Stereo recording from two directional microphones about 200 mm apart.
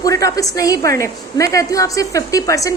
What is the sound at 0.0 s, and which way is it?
A woman's voice, 15° left (ahead or behind).